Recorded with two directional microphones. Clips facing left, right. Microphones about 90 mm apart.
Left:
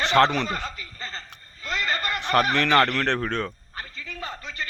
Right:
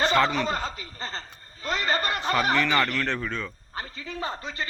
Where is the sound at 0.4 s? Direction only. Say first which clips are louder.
Right 2 dB; 30° right (ahead or behind).